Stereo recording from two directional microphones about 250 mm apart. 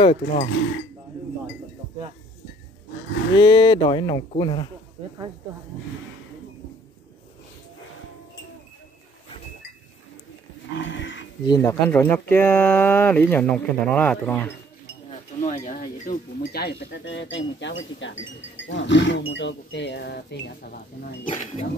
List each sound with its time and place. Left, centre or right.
0.0 s speech: left
3.3 s speech: centre
10.7 s livestock: left
11.4 s speech: centre
15.0 s speech: left